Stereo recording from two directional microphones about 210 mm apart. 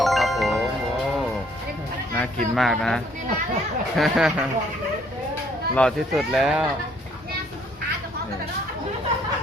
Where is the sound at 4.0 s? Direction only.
5° right (ahead or behind).